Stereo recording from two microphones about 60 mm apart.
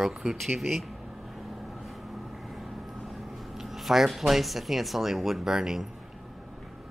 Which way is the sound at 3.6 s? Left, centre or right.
Centre.